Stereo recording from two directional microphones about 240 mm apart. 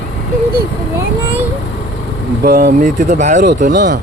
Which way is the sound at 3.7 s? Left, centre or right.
Right.